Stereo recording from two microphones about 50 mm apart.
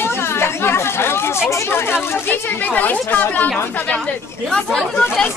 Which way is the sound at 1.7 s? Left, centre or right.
Left.